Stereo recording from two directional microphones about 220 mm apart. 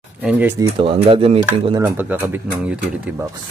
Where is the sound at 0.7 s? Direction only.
25° right (ahead or behind); by 3.2 s 5° right (ahead or behind).